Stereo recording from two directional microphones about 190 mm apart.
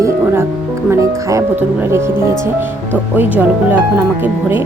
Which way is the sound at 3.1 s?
10° right (ahead or behind).